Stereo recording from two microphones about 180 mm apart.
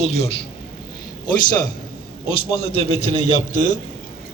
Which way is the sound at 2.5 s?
30° left (ahead or behind).